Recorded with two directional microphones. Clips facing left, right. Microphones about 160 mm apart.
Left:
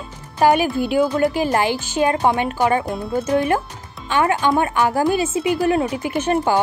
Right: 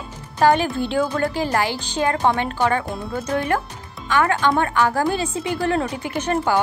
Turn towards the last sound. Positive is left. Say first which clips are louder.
# left 2 dB
turn(degrees=15)  # may be behind; listen again after turning